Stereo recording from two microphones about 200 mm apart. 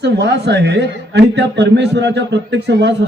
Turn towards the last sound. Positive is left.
turn(degrees=-60)  # may be behind; listen again after turning